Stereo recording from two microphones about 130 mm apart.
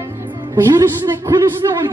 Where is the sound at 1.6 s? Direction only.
30° right (ahead or behind).